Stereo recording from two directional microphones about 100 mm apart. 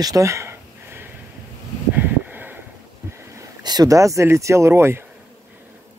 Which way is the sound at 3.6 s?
40° right (ahead or behind).